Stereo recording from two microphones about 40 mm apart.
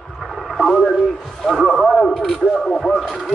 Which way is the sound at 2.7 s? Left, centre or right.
Centre.